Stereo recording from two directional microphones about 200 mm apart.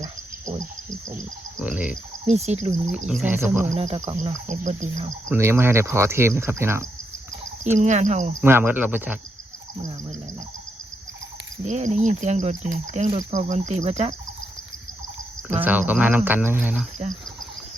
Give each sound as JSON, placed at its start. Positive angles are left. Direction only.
{"t": 1.5, "sound": "speech", "side_deg": -5}
{"t": 2.2, "sound": "speech", "side_deg": -30}
{"t": 3.1, "sound": "speech", "side_deg": -5}
{"t": 3.8, "sound": "speech", "side_deg": -35}
{"t": 5.3, "sound": "speech", "side_deg": -10}
{"t": 7.6, "sound": "speech", "side_deg": -35}
{"t": 8.4, "sound": "speech", "side_deg": -10}
{"t": 11.6, "sound": "speech", "side_deg": -35}
{"t": 15.6, "sound": "speech", "side_deg": -10}